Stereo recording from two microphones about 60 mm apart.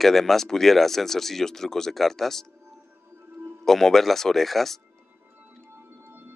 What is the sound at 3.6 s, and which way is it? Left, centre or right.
Speech, centre.